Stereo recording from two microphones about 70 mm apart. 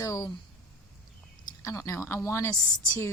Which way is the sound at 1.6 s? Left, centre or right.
Left.